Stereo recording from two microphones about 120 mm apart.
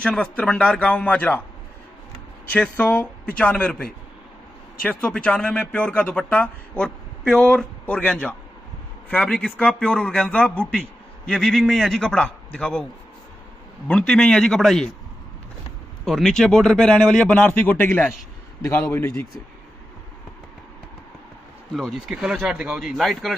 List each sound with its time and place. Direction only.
0.0 s speech: 10° left (ahead or behind)
2.8 s speech: 15° left (ahead or behind)
13.8 s speech: 5° left (ahead or behind)
16.1 s speech: 5° left (ahead or behind); by 19.2 s 25° left (ahead or behind)
21.7 s speech: centre (ahead or behind)